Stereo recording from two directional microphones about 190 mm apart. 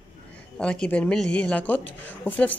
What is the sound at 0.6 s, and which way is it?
A woman's voice, 5° left (ahead or behind).